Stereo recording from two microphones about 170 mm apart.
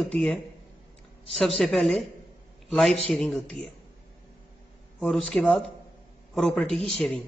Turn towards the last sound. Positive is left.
turn(degrees=0)  # may be behind; listen again after turning